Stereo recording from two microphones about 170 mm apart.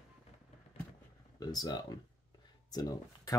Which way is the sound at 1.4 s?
25° left (ahead or behind).